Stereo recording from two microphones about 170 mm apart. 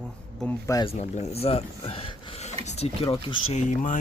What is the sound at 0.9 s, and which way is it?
Speech, 40° left (ahead or behind).